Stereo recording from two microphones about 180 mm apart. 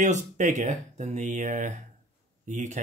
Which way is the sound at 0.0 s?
45° right (ahead or behind).